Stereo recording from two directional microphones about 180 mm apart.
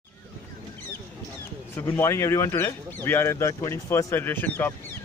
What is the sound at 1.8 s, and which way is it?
Speech, 10° left (ahead or behind).